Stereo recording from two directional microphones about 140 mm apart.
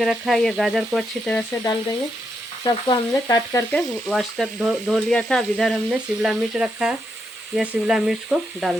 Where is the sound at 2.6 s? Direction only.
25° left (ahead or behind).